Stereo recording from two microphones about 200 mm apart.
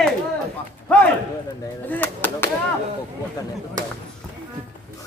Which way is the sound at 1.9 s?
10° left (ahead or behind).